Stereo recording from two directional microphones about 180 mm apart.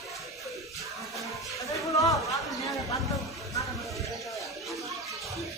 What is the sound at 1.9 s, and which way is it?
Chatter, 20° left (ahead or behind).